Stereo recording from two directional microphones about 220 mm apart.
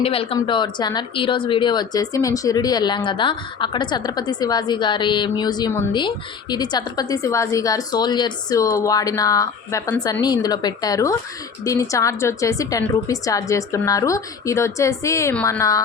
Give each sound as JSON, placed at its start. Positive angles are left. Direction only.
{"t": 0.0, "sound": "a woman's voice", "side_deg": 25}